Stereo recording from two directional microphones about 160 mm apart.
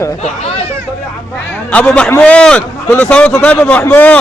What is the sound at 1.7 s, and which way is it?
Speech, 5° left (ahead or behind).